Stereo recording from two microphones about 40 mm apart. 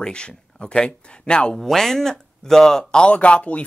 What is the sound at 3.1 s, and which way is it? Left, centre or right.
Speech, left.